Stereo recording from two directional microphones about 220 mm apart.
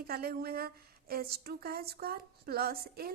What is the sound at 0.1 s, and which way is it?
A woman's voice, 45° right (ahead or behind).